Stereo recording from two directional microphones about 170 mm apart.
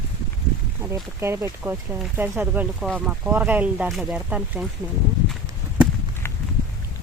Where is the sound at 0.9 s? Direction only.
15° right (ahead or behind).